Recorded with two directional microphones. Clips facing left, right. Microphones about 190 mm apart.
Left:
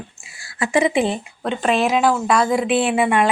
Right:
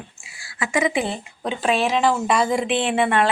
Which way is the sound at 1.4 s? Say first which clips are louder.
Left 2 dB; centre (ahead or behind).